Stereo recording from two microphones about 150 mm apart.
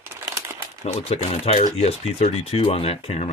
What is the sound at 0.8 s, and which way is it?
Speech, 45° left (ahead or behind).